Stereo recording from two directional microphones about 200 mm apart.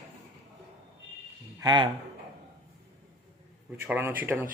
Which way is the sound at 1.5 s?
20° right (ahead or behind).